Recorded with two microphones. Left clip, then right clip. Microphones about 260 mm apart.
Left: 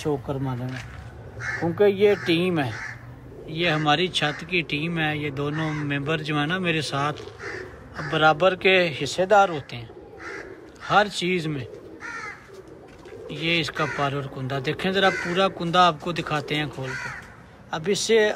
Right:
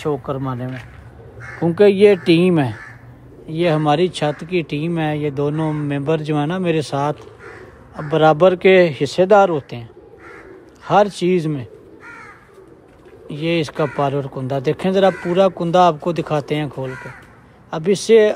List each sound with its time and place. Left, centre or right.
0.0 s speech: right
1.8 s speech: right
13.3 s speech: right